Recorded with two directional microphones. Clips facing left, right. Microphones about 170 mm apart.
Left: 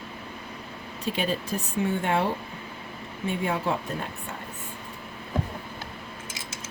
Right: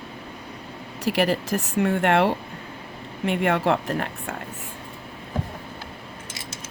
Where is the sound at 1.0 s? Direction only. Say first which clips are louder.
Right 6 dB; 80° right.